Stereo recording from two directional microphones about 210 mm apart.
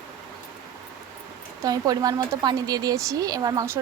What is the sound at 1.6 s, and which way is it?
Speech, 15° right (ahead or behind).